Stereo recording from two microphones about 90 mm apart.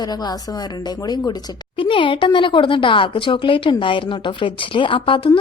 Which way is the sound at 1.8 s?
70° left (ahead or behind).